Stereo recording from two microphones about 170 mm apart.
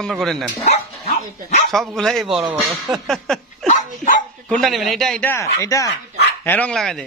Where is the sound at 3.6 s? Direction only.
50° left (ahead or behind).